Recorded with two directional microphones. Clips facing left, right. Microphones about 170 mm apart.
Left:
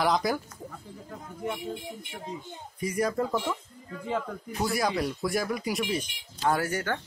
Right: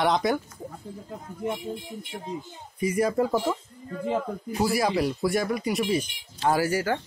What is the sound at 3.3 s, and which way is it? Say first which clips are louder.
Speech: right 4 dB; 35° right (ahead or behind).